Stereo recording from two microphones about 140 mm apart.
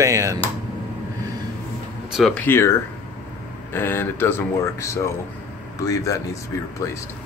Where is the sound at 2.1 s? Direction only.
Centre (ahead or behind).